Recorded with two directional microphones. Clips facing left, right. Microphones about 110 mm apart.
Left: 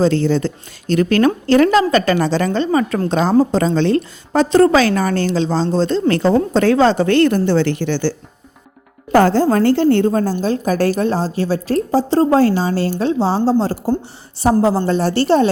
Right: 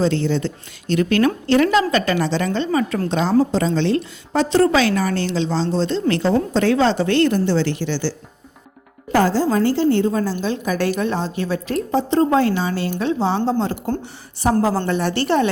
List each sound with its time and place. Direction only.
0.0 s a woman's voice: 40° left (ahead or behind)
9.1 s a woman's voice: 55° left (ahead or behind)
10.1 s a woman's voice: 45° left (ahead or behind)